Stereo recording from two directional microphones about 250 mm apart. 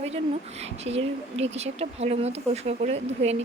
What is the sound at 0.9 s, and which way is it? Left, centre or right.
A woman's voice, right.